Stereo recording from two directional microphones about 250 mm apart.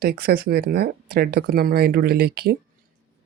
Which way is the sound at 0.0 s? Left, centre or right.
Right.